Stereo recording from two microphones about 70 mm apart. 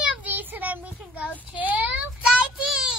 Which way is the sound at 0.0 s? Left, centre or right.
Right.